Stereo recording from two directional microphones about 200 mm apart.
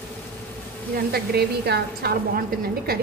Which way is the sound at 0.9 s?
50° right (ahead or behind).